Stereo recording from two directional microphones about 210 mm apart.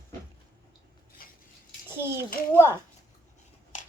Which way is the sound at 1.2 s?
45° left (ahead or behind).